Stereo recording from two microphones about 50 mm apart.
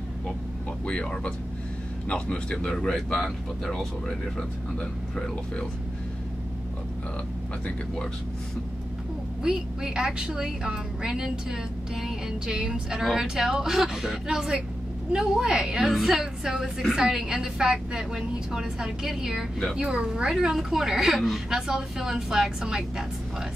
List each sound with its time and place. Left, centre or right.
0.8 s a woman's voice: centre
9.4 s a woman's voice: centre
20.3 s a woman's voice: centre